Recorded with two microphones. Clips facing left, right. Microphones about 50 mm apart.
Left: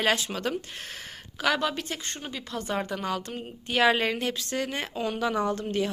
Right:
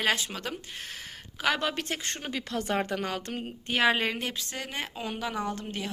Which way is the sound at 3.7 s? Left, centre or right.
Centre.